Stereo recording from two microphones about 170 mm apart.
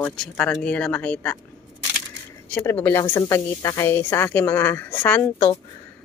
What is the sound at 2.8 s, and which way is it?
Speech, 15° left (ahead or behind).